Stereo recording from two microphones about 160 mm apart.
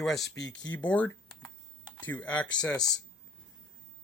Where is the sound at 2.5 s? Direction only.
25° left (ahead or behind).